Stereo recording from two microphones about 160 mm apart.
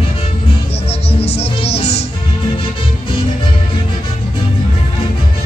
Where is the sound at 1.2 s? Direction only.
40° left (ahead or behind).